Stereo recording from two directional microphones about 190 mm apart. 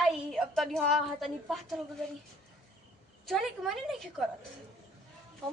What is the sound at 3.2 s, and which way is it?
Speech, centre (ahead or behind).